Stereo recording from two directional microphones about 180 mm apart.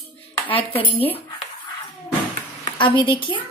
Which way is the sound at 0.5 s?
30° left (ahead or behind).